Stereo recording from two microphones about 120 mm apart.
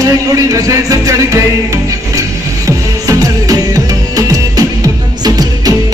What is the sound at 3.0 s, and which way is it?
Music, 30° right (ahead or behind).